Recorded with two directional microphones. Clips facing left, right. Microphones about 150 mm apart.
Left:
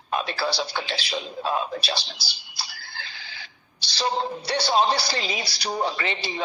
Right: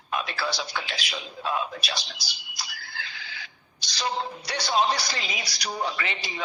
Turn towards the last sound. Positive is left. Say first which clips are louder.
# left 4 dB
turn(degrees=30)  # may be behind; listen again after turning